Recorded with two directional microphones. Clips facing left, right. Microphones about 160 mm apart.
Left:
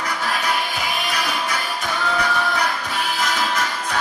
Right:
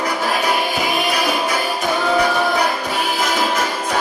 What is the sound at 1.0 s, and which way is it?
Music, 10° right (ahead or behind).